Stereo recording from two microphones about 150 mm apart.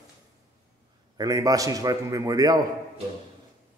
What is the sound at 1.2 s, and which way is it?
A man's voice, 25° right (ahead or behind).